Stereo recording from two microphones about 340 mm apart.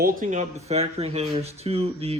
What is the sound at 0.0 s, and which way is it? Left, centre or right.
Speech, right.